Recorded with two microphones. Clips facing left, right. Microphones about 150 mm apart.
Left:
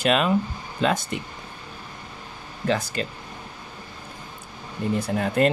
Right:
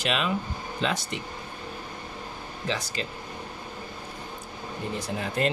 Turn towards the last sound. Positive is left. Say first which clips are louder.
# left 6 dB
turn(degrees=55)  # may be behind; listen again after turning